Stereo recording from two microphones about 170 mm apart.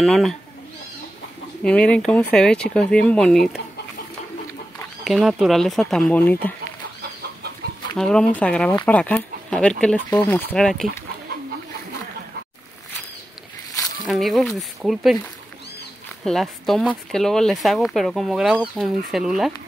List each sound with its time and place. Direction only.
0.0 s speech: centre (ahead or behind)
1.6 s speech: 5° left (ahead or behind)
5.0 s speech: centre (ahead or behind)
7.6 s chicken: 65° right (ahead or behind)
8.0 s speech: 5° left (ahead or behind)
14.0 s speech: centre (ahead or behind)
16.3 s speech: centre (ahead or behind)